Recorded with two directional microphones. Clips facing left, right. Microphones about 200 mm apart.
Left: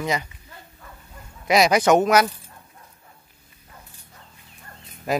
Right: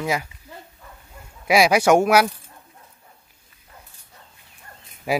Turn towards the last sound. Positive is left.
turn(degrees=-10)  # may be behind; listen again after turning